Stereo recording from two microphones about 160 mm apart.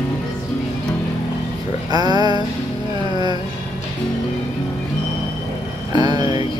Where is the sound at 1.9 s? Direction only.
25° right (ahead or behind).